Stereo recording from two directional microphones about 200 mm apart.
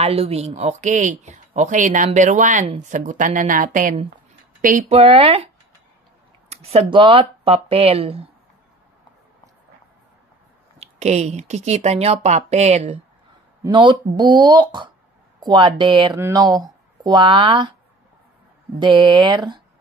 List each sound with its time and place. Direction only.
0.0 s speech: 30° right (ahead or behind)
6.5 s speech: 30° right (ahead or behind)
10.8 s speech: 35° right (ahead or behind)
13.6 s speech: 25° right (ahead or behind)
18.8 s speech: 25° right (ahead or behind)